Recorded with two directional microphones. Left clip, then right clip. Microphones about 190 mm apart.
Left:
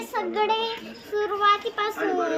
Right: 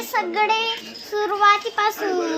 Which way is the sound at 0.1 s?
20° right (ahead or behind).